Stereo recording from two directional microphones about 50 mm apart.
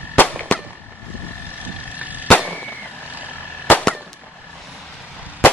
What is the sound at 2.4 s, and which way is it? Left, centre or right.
Fireworks, right.